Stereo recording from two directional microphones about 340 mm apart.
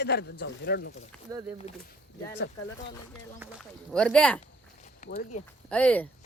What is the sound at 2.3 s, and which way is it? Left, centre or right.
Speech, left.